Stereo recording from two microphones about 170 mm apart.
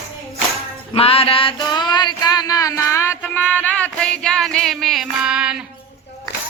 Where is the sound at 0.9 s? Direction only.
35° left (ahead or behind); by 3.1 s 15° left (ahead or behind).